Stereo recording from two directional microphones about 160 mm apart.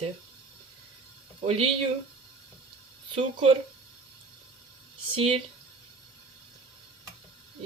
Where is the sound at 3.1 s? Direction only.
35° right (ahead or behind).